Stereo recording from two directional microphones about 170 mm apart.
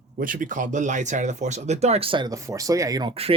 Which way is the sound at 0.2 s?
55° right (ahead or behind).